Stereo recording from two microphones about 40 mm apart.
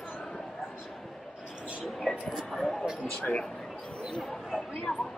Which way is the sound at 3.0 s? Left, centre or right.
Left.